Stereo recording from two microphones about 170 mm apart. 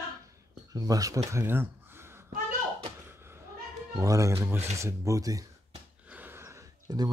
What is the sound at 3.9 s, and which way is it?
Speech, 20° right (ahead or behind).